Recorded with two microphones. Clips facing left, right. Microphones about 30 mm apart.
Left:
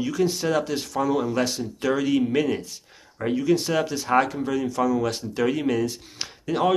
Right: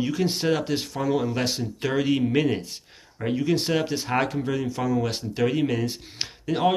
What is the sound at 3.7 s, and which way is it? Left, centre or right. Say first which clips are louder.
Speech: left 3 dB; right.